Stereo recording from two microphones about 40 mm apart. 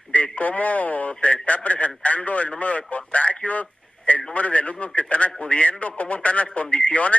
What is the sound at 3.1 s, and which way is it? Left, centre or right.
Radio, left.